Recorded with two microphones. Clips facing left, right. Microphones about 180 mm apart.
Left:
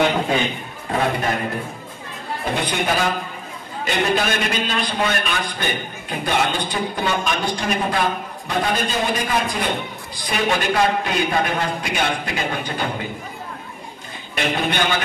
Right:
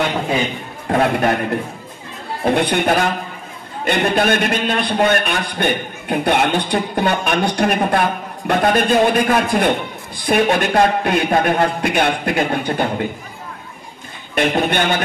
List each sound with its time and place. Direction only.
0.8 s a man's voice: 60° right (ahead or behind)
2.5 s a man's voice: 60° right (ahead or behind)
14.3 s speech: 50° right (ahead or behind)